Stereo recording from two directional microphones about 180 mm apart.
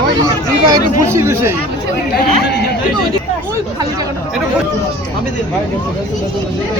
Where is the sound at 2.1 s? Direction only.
65° left (ahead or behind).